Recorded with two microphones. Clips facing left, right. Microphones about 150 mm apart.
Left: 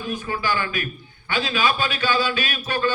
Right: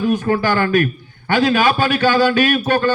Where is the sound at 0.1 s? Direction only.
50° right (ahead or behind).